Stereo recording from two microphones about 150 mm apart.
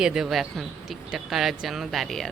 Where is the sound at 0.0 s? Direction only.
5° right (ahead or behind).